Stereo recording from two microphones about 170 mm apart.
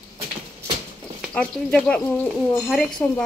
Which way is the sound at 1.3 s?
5° left (ahead or behind).